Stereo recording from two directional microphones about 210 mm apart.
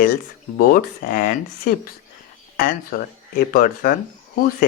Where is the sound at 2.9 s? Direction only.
45° left (ahead or behind).